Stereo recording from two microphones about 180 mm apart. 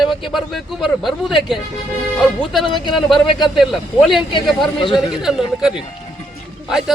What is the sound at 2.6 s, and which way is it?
Speech, 25° left (ahead or behind).